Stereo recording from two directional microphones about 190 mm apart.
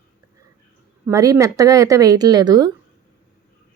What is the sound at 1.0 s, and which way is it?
Speech, 15° right (ahead or behind).